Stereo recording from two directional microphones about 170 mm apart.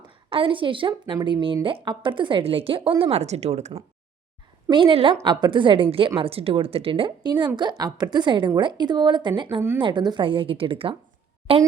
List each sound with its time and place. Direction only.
0.3 s a woman's voice: 30° right (ahead or behind)
9.6 s speech: 15° right (ahead or behind)
9.8 s a woman's voice: 25° right (ahead or behind)